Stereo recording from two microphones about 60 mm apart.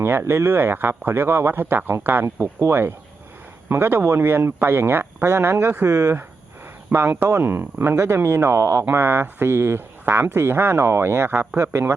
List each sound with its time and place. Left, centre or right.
0.0 s speech: right
2.2 s speech: right
6.9 s speech: right
8.8 s speech: right